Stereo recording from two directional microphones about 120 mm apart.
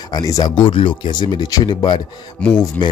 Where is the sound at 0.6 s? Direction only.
45° left (ahead or behind).